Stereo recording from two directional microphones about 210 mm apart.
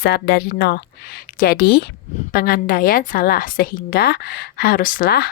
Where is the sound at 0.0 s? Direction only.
50° left (ahead or behind).